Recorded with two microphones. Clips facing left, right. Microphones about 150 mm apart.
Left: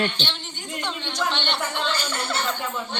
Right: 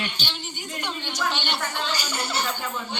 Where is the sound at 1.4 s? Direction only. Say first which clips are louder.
Left 2 dB; 5° right (ahead or behind).